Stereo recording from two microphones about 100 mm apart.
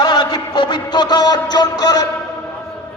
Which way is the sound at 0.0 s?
45° left (ahead or behind).